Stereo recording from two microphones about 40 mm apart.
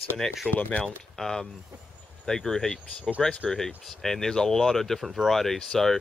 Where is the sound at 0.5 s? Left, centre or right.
Left.